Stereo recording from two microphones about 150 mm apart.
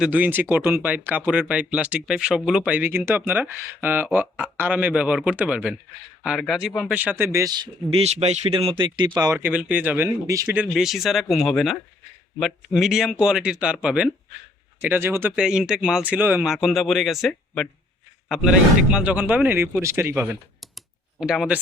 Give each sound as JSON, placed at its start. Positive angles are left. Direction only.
{"t": 0.0, "sound": "speech", "side_deg": -10}
{"t": 7.9, "sound": "speech", "side_deg": -45}
{"t": 9.4, "sound": "speech", "side_deg": -10}
{"t": 10.6, "sound": "speech", "side_deg": -5}
{"t": 20.6, "sound": "computer keyboard", "side_deg": 0}